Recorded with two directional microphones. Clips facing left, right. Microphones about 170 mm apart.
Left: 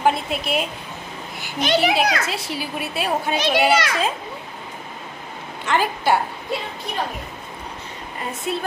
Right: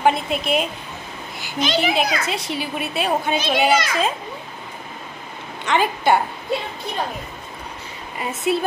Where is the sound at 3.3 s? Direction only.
70° left (ahead or behind).